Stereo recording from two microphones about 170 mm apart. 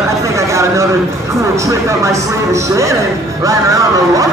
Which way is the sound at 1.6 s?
15° right (ahead or behind).